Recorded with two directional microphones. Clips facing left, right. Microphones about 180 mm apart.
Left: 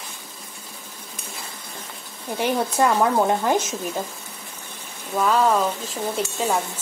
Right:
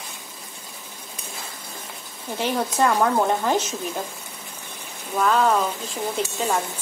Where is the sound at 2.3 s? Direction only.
10° left (ahead or behind).